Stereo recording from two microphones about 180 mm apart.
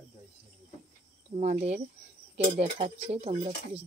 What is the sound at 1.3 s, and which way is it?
Speech, 35° right (ahead or behind).